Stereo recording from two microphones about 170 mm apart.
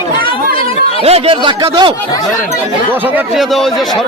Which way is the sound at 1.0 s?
35° right (ahead or behind).